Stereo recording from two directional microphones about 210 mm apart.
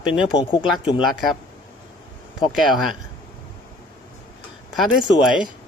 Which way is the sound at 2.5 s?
Centre (ahead or behind).